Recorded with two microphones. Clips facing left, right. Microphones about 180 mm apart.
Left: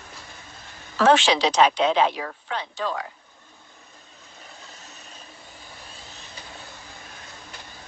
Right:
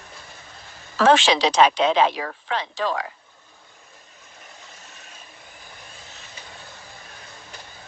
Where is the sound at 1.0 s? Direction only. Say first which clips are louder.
Right 1 dB; 90° right.